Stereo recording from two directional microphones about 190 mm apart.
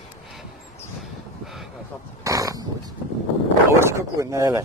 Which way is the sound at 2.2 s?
15° right (ahead or behind).